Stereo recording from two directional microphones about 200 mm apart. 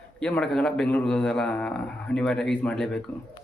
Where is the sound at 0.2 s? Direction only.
5° left (ahead or behind).